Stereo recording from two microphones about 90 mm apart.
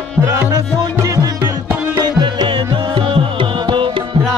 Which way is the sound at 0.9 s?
40° right (ahead or behind).